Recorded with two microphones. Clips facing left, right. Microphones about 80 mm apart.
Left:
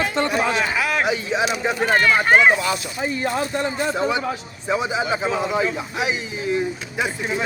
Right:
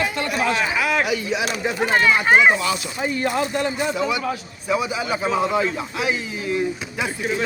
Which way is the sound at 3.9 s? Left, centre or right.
Left.